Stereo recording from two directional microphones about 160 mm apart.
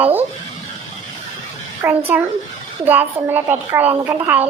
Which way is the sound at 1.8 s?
10° right (ahead or behind).